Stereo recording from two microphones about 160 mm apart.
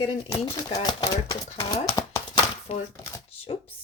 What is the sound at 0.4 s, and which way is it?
Speech, 25° left (ahead or behind).